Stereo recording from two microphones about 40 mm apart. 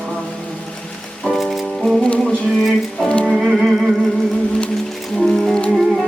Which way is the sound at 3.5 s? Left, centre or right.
Centre.